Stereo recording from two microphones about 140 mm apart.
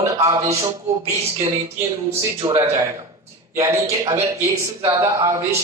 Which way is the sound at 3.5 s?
20° right (ahead or behind).